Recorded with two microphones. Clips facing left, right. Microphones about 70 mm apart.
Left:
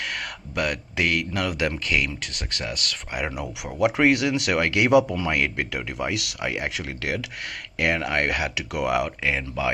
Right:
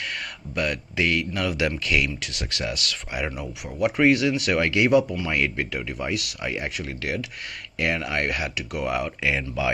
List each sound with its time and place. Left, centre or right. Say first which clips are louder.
0.0 s speech: left 1 dB; left
2.0 s speech: right 1 dB; left
3.8 s speech: even; left
7.8 s speech: left 2 dB; left
9.2 s speech: right 1 dB; left